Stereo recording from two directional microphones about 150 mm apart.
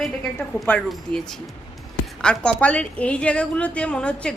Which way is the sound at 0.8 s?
5° left (ahead or behind).